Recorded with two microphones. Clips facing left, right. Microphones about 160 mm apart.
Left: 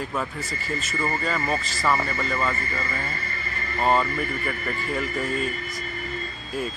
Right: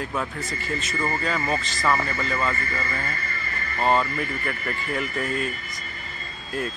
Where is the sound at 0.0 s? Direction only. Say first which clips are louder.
Even; centre (ahead or behind).